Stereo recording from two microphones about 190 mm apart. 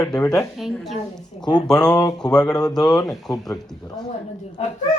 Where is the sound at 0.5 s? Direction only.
Centre (ahead or behind).